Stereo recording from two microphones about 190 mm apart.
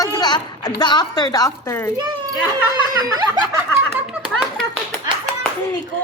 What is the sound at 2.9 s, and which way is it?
Speech, 20° right (ahead or behind).